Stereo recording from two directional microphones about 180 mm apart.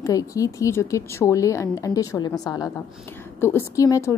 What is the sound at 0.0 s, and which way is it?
A woman's voice, 20° left (ahead or behind).